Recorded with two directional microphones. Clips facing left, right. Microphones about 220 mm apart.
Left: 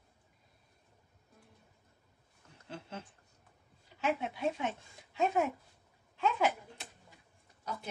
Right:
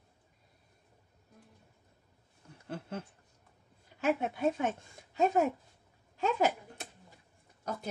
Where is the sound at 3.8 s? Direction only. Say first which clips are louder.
Right 3 dB; 50° right (ahead or behind).